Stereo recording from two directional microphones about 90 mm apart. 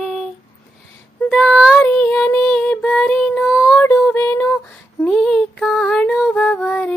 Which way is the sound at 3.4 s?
5° right (ahead or behind).